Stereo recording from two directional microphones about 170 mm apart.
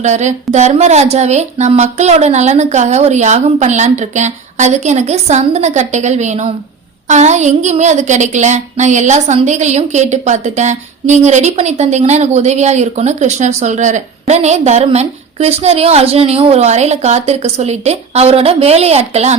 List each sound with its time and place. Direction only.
0.0 s a woman's voice: 45° right (ahead or behind)